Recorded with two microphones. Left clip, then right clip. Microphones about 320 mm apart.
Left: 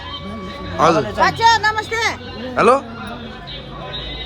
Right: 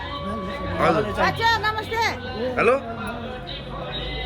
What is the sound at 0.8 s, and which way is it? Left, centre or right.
Speech, centre.